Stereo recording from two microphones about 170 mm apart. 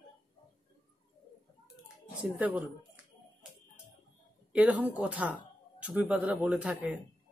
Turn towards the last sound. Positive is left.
turn(degrees=-10)  # may be behind; listen again after turning